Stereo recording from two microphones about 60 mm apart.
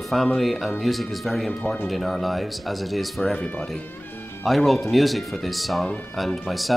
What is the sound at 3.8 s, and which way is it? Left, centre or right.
Music, left.